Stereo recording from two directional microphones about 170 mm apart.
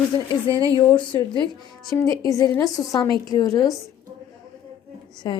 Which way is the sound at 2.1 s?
20° left (ahead or behind).